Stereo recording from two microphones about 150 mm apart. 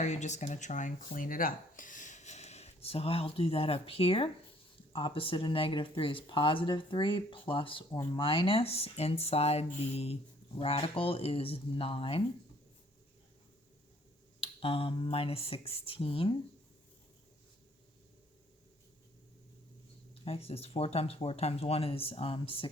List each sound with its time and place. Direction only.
0.0 s speech: 50° left (ahead or behind)
14.4 s speech: 40° left (ahead or behind)
20.2 s speech: 40° left (ahead or behind)